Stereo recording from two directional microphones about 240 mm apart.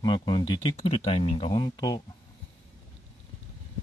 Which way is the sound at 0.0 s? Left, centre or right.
Centre.